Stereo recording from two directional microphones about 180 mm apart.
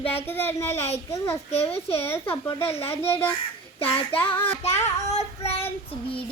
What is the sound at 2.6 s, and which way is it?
Speech, 35° left (ahead or behind).